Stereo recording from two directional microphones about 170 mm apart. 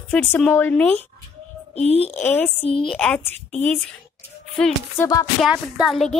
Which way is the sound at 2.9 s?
5° left (ahead or behind).